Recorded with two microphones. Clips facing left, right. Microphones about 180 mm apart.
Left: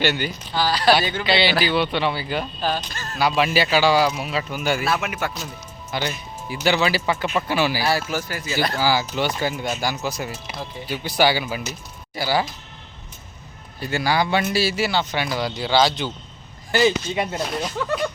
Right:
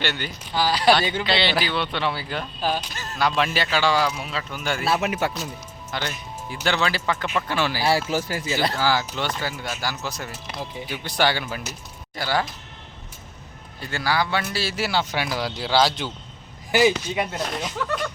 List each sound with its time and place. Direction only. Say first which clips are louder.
0.0 s a man's voice: left 6 dB; 5° left (ahead or behind)
0.5 s speech: even; 15° right (ahead or behind)
1.2 s a man's voice: left 3 dB; centre (ahead or behind)
2.6 s speech: left 1 dB; 10° right (ahead or behind)
3.2 s speech: left 3 dB; 5° left (ahead or behind)
4.9 s speech: right 2 dB; 30° right (ahead or behind)
5.9 s speech: left 3 dB; 5° left (ahead or behind)
7.8 s speech: right 1 dB; 25° right (ahead or behind)
8.8 s a man's voice: left 2 dB; 5° left (ahead or behind)
13.7 s a man's voice: left 3 dB; 10° left (ahead or behind)
17.2 s a man's voice: left 2 dB; centre (ahead or behind)